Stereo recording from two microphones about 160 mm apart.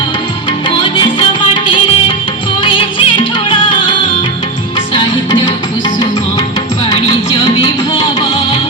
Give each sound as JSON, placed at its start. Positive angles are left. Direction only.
{"t": 2.6, "sound": "music", "side_deg": 30}
{"t": 7.6, "sound": "music", "side_deg": 35}